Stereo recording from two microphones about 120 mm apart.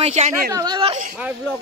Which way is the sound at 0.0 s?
70° right (ahead or behind).